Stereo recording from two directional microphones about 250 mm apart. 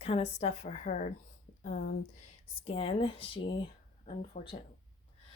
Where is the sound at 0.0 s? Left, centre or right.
Left.